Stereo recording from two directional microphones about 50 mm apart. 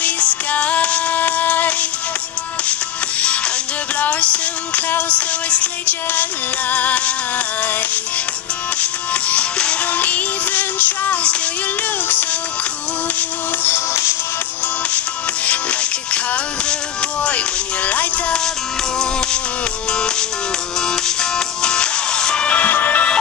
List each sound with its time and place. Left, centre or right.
0.0 s music: left
4.0 s music: left
9.1 s music: left
9.9 s music: left
13.7 s music: left
15.4 s music: left
17.2 s music: left
19.9 s music: centre; by 23.0 s left